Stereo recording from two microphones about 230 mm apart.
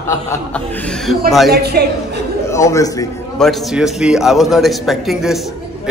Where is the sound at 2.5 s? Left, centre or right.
Centre.